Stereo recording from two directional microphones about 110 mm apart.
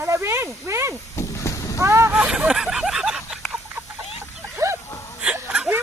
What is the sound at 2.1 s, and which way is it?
Speech, 10° right (ahead or behind).